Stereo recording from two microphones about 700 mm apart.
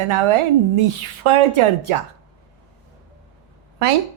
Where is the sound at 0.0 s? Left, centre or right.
Right.